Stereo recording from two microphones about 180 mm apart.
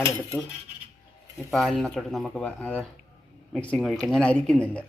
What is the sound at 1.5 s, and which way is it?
Speech, centre (ahead or behind).